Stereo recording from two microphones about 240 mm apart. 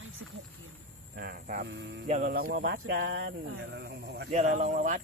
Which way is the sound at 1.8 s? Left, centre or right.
Right.